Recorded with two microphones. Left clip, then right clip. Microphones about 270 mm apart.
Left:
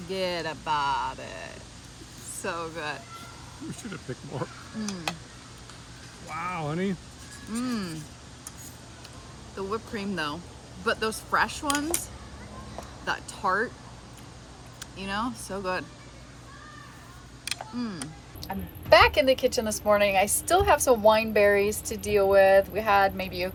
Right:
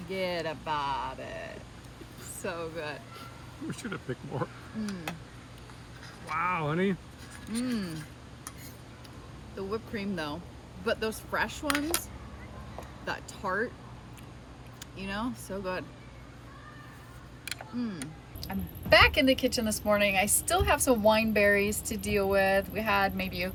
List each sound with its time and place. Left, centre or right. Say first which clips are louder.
0.1 s speech: left 2 dB; centre
6.2 s speech: right 2 dB; centre
7.5 s speech: left 2 dB; centre
9.6 s speech: left 3 dB; centre
13.1 s speech: left 6 dB; centre
14.8 s speech: left 5 dB; centre
17.4 s a sound: left 3 dB; centre
18.4 s speech: left 5 dB; centre